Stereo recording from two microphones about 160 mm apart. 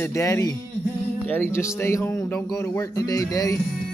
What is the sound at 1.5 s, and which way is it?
Music, 15° left (ahead or behind).